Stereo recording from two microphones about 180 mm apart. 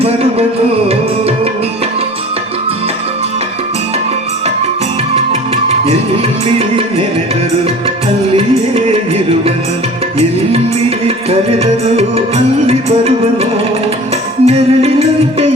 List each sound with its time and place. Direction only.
0.0 s music: 35° right (ahead or behind)
5.1 s music: 35° right (ahead or behind)
8.4 s music: 35° right (ahead or behind)
10.2 s music: 35° right (ahead or behind)